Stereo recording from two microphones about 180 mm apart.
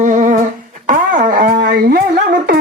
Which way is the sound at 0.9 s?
50° right (ahead or behind).